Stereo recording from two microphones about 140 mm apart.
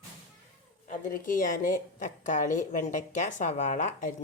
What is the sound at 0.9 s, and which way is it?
A woman's voice, 80° left.